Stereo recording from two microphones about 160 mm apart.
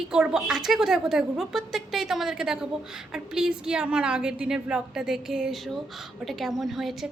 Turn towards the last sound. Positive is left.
turn(degrees=0)  # may be behind; listen again after turning